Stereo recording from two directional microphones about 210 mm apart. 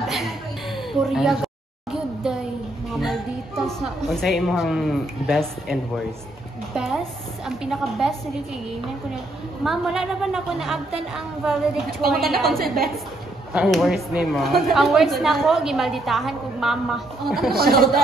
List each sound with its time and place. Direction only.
0.0 s a sound: centre (ahead or behind)
3.0 s a woman's voice: centre (ahead or behind)
9.6 s a woman's voice: centre (ahead or behind)
17.5 s speech: 45° right (ahead or behind)